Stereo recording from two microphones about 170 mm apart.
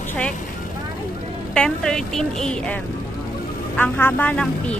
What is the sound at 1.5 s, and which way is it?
A woman's voice, 5° left (ahead or behind).